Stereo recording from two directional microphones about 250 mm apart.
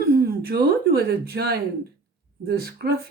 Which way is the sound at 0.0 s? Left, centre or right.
Right.